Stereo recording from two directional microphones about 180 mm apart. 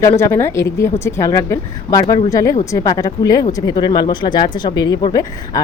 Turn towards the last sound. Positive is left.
turn(degrees=20)  # may be behind; listen again after turning